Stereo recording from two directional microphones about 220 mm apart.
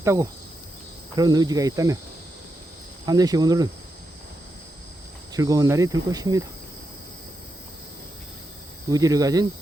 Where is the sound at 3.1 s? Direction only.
15° right (ahead or behind).